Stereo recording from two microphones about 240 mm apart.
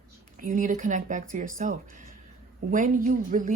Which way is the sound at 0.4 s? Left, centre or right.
Right.